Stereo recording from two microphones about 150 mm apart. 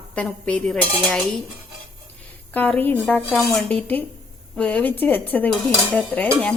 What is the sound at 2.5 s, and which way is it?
A woman's voice, 10° left (ahead or behind).